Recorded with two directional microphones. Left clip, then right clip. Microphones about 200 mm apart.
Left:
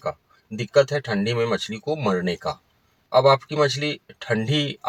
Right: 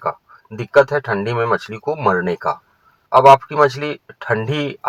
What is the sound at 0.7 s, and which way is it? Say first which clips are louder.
Speech: right 6 dB; 35° right (ahead or behind).